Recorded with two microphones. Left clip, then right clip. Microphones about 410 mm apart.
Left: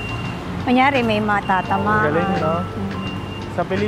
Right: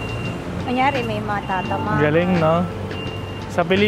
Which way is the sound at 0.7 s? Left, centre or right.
Left.